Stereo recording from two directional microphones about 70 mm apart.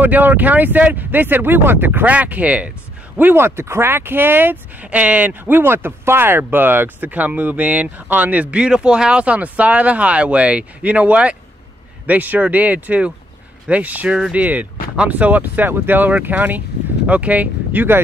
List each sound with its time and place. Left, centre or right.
0.0 s speech: right